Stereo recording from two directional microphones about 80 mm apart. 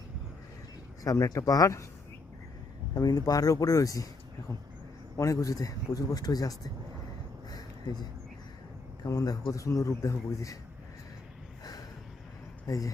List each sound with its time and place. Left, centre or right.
1.0 s speech: left
2.9 s speech: left
9.0 s speech: left
12.6 s speech: left